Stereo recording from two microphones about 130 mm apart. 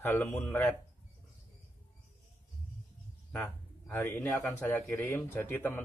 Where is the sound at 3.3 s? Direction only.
10° left (ahead or behind).